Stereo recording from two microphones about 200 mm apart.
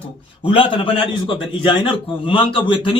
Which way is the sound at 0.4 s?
25° left (ahead or behind).